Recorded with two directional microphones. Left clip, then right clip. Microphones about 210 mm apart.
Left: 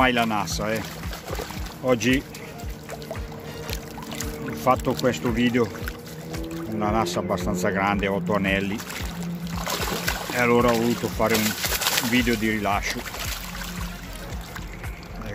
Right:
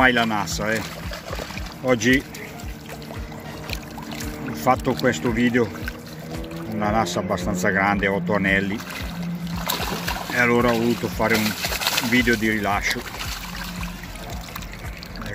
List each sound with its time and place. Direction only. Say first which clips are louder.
0.0 s speech: right 3 dB; 5° right (ahead or behind)
1.9 s speech: right 3 dB; centre (ahead or behind)
4.6 s speech: right 1 dB; centre (ahead or behind)
6.8 s speech: right 2 dB; 5° right (ahead or behind)
9.6 s music: right 1 dB; 25° left (ahead or behind)
10.3 s speech: right 1 dB; 5° left (ahead or behind)
11.4 s a sound: right 1 dB; 30° left (ahead or behind)
12.1 s speech: right 3 dB; centre (ahead or behind)